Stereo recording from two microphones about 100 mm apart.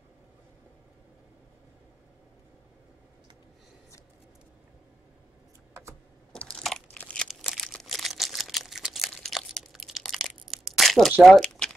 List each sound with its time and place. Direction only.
5.7 s computer keyboard: 30° right (ahead or behind)
6.3 s crushing: 10° left (ahead or behind)
6.9 s crumpling: 15° left (ahead or behind)
7.2 s a sound: centre (ahead or behind)